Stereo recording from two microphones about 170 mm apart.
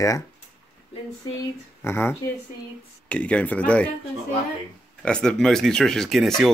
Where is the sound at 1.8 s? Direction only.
15° left (ahead or behind).